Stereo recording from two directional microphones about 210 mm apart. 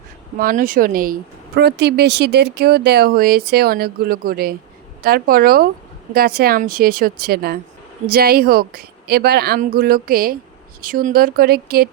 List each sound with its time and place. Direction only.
0.3 s speech: 40° right (ahead or behind)